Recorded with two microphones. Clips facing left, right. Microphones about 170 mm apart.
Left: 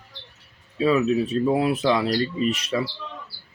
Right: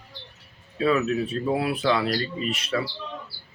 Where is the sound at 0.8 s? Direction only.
15° left (ahead or behind).